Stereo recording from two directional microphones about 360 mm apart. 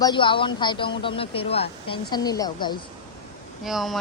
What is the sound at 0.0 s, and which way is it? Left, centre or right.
Speech, centre.